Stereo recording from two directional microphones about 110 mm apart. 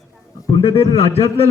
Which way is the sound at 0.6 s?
60° left (ahead or behind).